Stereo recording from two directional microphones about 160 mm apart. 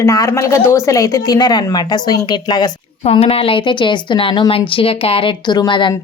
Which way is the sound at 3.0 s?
40° left (ahead or behind).